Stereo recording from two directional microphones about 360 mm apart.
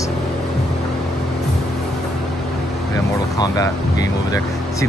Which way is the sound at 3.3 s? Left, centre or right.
Centre.